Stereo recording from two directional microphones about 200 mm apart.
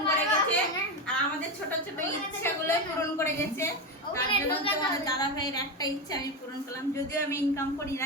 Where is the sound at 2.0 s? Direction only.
10° left (ahead or behind).